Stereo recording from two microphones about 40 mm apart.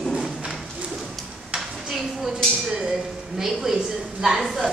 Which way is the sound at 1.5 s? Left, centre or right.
Centre.